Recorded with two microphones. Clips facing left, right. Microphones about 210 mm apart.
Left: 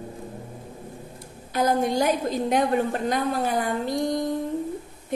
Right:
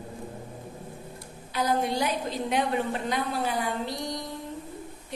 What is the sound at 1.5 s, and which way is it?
A woman's voice, 45° left (ahead or behind).